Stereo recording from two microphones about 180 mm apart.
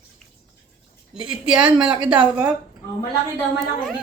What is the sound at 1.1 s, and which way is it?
A woman's voice, 5° right (ahead or behind).